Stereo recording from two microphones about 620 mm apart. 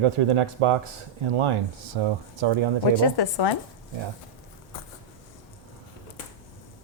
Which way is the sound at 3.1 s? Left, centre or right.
Left.